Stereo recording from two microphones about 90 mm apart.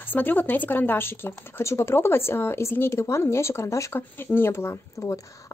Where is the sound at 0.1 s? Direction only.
20° left (ahead or behind).